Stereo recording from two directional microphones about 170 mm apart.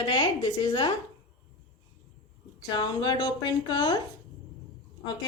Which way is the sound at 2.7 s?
25° left (ahead or behind).